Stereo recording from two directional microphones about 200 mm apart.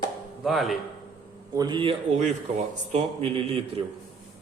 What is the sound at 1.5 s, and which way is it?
A man's voice, 20° right (ahead or behind).